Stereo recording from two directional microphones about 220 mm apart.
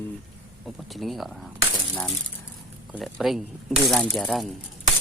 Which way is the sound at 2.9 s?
Centre (ahead or behind).